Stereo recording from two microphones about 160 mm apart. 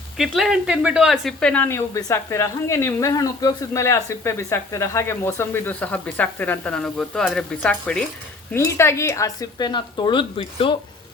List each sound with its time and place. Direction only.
0.2 s speech: centre (ahead or behind); by 10.8 s 30° left (ahead or behind)